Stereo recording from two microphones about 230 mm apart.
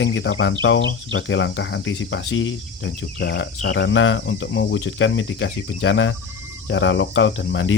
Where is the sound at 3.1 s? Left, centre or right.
Left.